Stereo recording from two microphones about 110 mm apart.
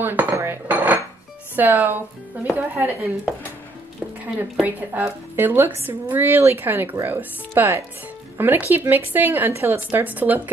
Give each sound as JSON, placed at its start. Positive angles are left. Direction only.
{"t": 0.0, "sound": "dishes", "side_deg": -15}
{"t": 1.6, "sound": "speech", "side_deg": -15}
{"t": 4.4, "sound": "speech", "side_deg": -15}